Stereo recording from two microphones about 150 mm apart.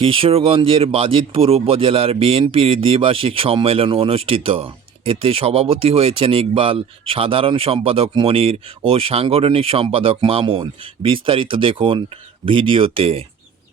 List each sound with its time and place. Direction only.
0.0 s speech: 35° right (ahead or behind)